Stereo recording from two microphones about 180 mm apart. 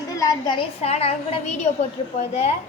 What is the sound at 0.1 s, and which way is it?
A woman's voice, 20° left (ahead or behind).